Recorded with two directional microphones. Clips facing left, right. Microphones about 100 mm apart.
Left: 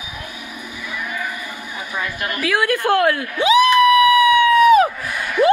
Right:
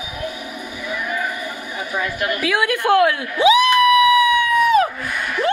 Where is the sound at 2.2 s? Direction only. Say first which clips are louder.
Even; 20° right (ahead or behind).